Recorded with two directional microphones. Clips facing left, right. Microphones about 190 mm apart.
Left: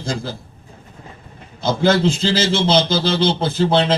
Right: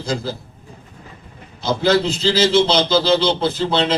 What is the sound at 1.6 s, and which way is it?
A man's voice, 50° left (ahead or behind).